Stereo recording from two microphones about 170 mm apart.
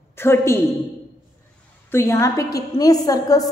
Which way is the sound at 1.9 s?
15° left (ahead or behind).